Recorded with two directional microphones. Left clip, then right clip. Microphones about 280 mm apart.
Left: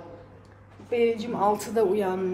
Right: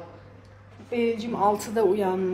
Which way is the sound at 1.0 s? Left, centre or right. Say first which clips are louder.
Even; centre.